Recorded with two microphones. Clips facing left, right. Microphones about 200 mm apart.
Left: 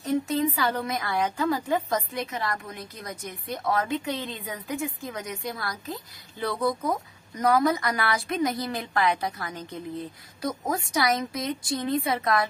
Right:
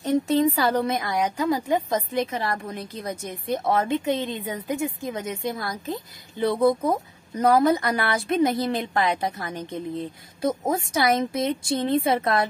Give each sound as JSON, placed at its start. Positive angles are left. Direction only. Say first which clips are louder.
{"t": 0.3, "sound": "a woman's voice", "louder": "right 5 dB", "side_deg": -35}
{"t": 0.9, "sound": "a woman's voice", "louder": "right 2 dB", "side_deg": -15}